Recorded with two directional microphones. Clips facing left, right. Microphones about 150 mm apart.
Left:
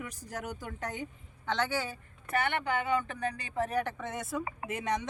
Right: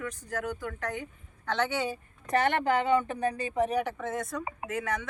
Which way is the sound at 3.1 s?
25° right (ahead or behind).